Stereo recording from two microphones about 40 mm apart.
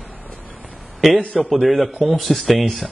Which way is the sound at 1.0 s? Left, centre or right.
Centre.